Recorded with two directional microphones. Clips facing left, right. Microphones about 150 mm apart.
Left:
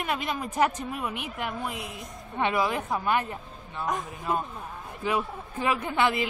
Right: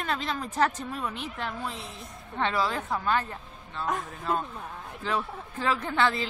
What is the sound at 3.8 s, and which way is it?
A woman's voice, centre (ahead or behind).